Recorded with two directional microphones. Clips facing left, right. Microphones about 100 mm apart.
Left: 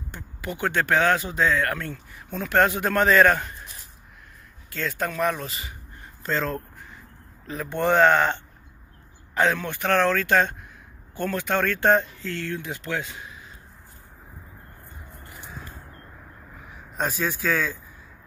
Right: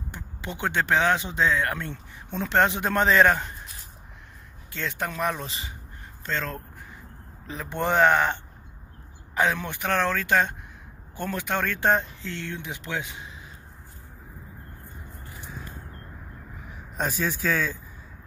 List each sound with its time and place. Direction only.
0.1 s speech: 20° right (ahead or behind)
4.6 s speech: 20° right (ahead or behind)
5.5 s speech: 30° right (ahead or behind)
6.2 s speech: centre (ahead or behind)
7.4 s speech: 15° right (ahead or behind)
16.9 s speech: centre (ahead or behind)